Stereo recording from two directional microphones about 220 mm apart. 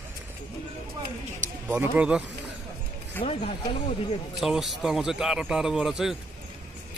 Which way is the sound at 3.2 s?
25° left (ahead or behind).